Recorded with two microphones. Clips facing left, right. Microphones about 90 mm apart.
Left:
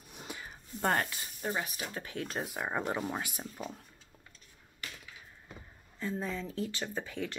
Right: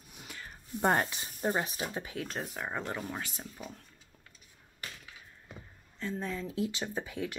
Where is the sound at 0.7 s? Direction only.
20° right (ahead or behind).